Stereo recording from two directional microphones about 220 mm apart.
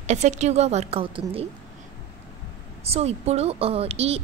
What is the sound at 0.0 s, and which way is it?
Speech, 30° right (ahead or behind).